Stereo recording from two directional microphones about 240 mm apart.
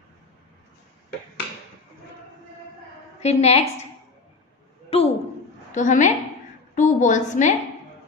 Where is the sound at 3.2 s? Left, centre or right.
Left.